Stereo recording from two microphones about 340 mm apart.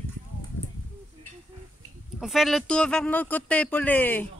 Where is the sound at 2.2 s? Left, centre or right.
Centre.